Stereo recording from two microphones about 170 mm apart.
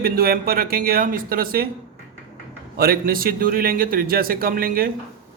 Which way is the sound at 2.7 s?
60° right (ahead or behind).